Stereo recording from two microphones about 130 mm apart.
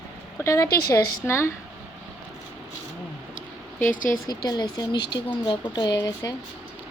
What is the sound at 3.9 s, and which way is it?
Speech, 90° left.